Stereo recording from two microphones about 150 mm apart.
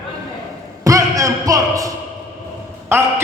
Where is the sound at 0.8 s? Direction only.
20° right (ahead or behind).